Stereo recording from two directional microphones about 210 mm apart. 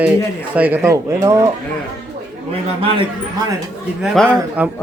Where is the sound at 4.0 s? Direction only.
Centre (ahead or behind).